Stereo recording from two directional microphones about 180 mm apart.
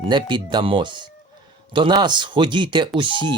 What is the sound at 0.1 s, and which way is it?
Speech, 25° right (ahead or behind).